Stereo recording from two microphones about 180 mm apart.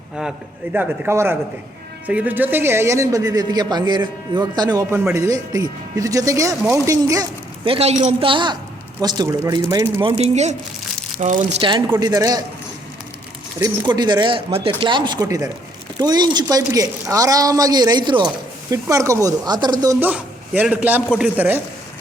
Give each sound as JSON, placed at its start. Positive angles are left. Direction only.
{"t": 0.2, "sound": "a man's voice", "side_deg": -5}
{"t": 11.9, "sound": "speech", "side_deg": -20}
{"t": 13.6, "sound": "speech", "side_deg": -25}
{"t": 20.0, "sound": "a man's voice", "side_deg": -10}